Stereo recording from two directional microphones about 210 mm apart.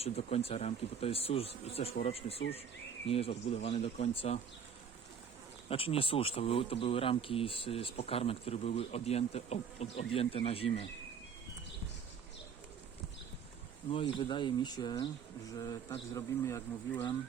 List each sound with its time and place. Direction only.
0.0 s speech: 30° left (ahead or behind)
5.6 s speech: 25° left (ahead or behind)
13.9 s speech: 25° left (ahead or behind)